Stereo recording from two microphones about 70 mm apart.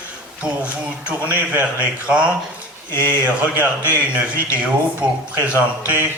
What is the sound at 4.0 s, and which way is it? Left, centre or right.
A man's voice, centre.